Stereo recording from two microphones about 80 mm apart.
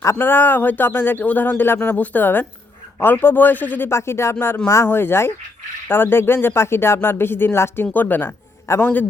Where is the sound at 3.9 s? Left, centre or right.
Left.